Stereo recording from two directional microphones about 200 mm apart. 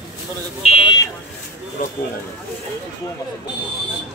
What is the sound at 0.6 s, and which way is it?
Buzzer, 25° left (ahead or behind).